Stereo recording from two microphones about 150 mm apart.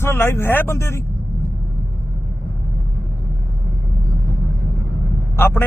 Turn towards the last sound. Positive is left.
turn(degrees=15)  # may be behind; listen again after turning